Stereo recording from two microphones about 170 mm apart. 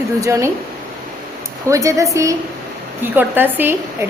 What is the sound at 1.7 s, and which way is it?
A woman's voice, 20° right (ahead or behind).